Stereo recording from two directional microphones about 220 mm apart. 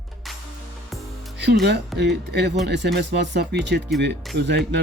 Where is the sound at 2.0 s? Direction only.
50° right (ahead or behind).